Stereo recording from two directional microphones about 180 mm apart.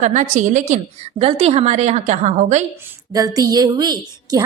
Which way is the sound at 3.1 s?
20° right (ahead or behind).